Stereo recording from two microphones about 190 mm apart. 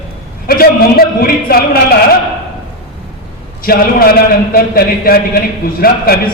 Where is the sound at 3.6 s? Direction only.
50° left (ahead or behind).